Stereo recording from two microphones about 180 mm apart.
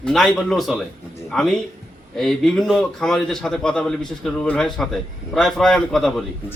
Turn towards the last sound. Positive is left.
turn(degrees=0)  # may be behind; listen again after turning